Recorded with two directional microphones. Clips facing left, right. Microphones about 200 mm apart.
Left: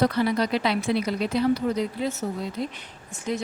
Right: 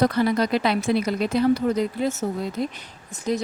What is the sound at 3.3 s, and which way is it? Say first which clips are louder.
Speech: right 4 dB; 40° right (ahead or behind).